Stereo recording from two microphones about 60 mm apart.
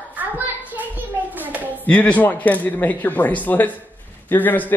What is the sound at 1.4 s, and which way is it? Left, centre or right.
Hands, right.